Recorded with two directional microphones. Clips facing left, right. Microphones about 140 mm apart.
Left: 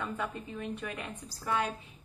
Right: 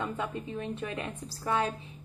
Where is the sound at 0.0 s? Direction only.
20° right (ahead or behind).